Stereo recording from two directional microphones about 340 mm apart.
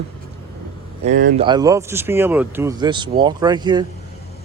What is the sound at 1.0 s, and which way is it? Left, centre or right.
Speech, right.